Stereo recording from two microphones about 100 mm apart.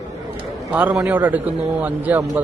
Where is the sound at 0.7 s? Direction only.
15° right (ahead or behind).